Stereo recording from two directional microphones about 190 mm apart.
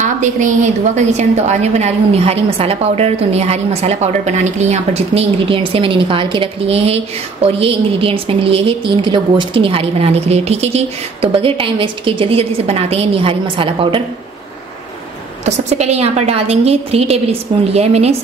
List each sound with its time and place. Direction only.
0.0 s a woman's voice: 40° right (ahead or behind)
15.4 s a woman's voice: 35° right (ahead or behind)